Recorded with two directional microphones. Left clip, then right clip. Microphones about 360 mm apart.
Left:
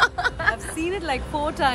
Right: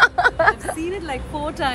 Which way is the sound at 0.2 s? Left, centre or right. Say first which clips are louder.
Right 7 dB; centre.